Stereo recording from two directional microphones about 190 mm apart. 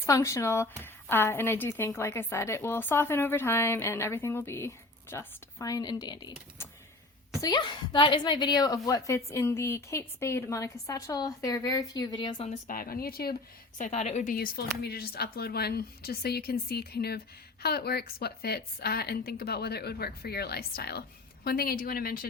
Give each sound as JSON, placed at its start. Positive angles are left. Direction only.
{"t": 0.0, "sound": "a woman's voice", "side_deg": 15}
{"t": 12.5, "sound": "a woman's voice", "side_deg": 45}
{"t": 13.7, "sound": "a woman's voice", "side_deg": 40}